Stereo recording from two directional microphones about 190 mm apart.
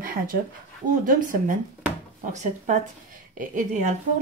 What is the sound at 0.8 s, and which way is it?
A woman's voice, 45° right (ahead or behind).